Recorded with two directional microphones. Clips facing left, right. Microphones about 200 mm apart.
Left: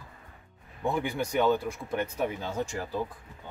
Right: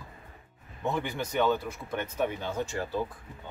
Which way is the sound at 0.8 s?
10° left (ahead or behind).